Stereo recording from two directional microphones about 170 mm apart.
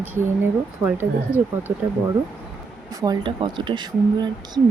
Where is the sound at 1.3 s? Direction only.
10° right (ahead or behind).